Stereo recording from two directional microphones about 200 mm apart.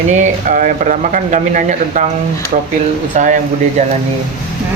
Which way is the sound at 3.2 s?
40° right (ahead or behind).